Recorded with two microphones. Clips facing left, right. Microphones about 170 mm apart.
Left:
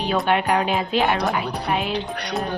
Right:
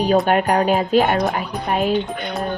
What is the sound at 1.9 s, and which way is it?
Speech, 80° left.